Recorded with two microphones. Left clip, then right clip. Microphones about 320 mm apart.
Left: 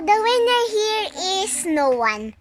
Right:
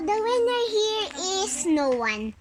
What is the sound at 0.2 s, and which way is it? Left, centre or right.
Child singing, left.